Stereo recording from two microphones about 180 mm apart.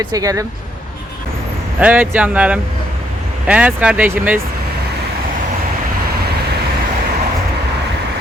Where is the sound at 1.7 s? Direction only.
10° right (ahead or behind).